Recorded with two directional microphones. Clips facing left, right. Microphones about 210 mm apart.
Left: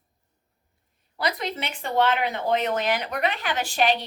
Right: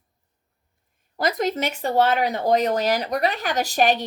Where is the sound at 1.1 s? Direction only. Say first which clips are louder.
Right 6 dB; 45° right (ahead or behind).